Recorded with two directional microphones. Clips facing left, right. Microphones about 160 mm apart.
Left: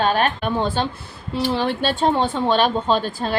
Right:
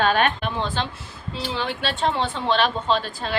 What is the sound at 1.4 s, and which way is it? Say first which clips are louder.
A woman's voice: left 7 dB; 55° left (ahead or behind).